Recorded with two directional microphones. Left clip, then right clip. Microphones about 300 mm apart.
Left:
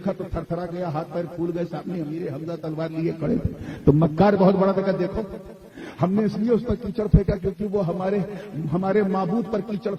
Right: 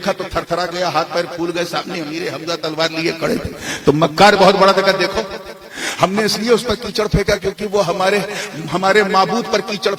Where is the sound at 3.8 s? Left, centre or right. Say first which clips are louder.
Right 8 dB; right.